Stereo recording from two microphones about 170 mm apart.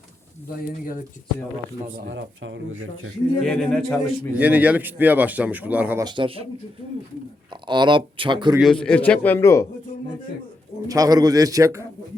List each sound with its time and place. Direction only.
2.0 s speech: 90° right
3.4 s a man's voice: 5° left (ahead or behind)
6.1 s speech: 30° right (ahead or behind)
7.7 s speech: 25° right (ahead or behind)
8.5 s a man's voice: centre (ahead or behind)
10.8 s speech: 20° right (ahead or behind)